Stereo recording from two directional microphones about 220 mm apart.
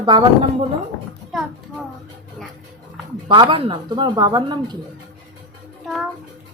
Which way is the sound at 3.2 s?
20° right (ahead or behind).